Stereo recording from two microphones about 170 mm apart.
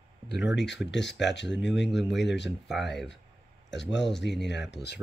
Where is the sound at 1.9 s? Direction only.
Centre (ahead or behind).